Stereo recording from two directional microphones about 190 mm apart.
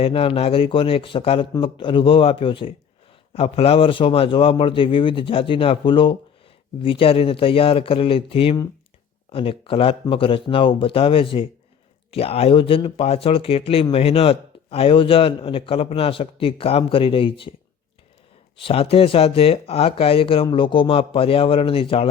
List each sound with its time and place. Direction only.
0.0 s speech: 30° left (ahead or behind)
18.5 s speech: 30° left (ahead or behind)